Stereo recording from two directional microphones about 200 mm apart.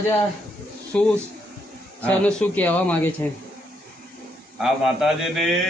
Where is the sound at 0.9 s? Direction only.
5° left (ahead or behind).